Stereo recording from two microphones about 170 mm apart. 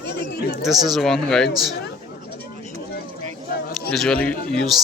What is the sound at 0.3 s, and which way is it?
Speech, 65° left (ahead or behind).